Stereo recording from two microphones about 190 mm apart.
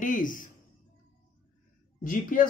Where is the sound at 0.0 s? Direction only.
45° left (ahead or behind).